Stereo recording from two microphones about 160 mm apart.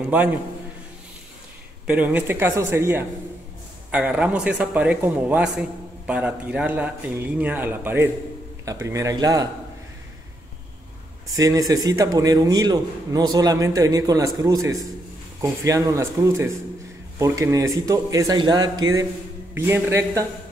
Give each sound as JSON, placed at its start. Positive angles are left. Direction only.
{"t": 0.1, "sound": "a man's voice", "side_deg": -10}
{"t": 1.9, "sound": "a man's voice", "side_deg": -10}
{"t": 11.3, "sound": "a man's voice", "side_deg": -20}